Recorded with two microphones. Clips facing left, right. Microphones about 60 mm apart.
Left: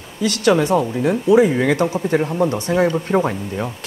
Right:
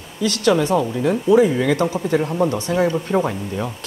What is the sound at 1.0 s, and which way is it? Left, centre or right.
Speech, centre.